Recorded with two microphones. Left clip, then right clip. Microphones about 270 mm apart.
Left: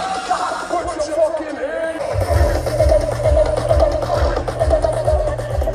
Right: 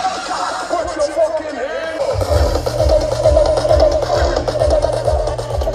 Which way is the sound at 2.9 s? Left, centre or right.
Right.